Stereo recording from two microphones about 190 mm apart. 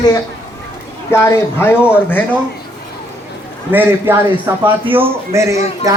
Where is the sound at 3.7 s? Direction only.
10° right (ahead or behind).